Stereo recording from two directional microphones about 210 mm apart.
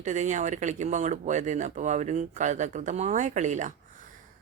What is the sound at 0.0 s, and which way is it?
A woman's voice, 35° right (ahead or behind).